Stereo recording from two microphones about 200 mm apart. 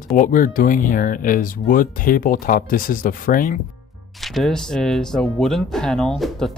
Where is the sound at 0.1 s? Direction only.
45° left (ahead or behind).